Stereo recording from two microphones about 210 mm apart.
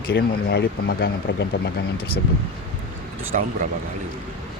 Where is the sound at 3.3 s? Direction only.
35° right (ahead or behind).